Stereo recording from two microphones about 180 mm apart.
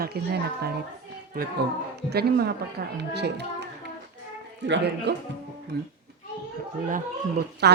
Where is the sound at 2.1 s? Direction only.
60° right (ahead or behind).